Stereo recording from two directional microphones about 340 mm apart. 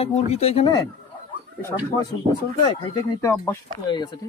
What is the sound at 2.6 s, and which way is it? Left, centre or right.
Speech, centre.